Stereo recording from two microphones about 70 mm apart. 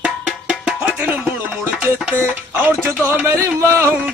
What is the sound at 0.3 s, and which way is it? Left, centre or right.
Music, centre.